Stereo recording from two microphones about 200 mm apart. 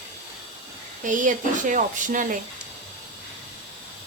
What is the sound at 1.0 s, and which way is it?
Speech, 40° right (ahead or behind).